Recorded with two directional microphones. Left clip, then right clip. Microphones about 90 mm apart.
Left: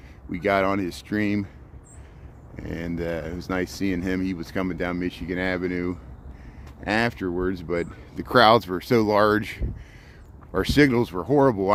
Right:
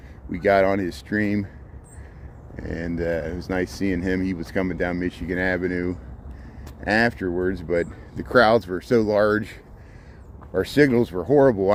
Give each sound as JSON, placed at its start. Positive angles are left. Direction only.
{"t": 0.3, "sound": "speech", "side_deg": 45}
{"t": 2.6, "sound": "speech", "side_deg": 45}
{"t": 8.1, "sound": "speech", "side_deg": 80}
{"t": 10.5, "sound": "speech", "side_deg": 90}